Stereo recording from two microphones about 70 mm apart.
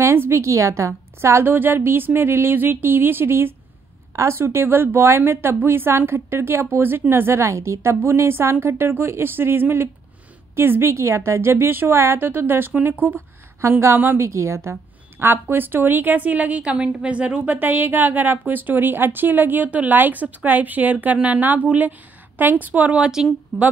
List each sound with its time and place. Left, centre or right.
0.0 s a woman's voice: right
13.6 s a woman's voice: right
14.2 s a woman's voice: right; by 23.2 s centre